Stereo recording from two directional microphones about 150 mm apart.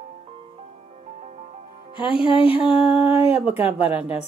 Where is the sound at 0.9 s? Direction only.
45° right (ahead or behind).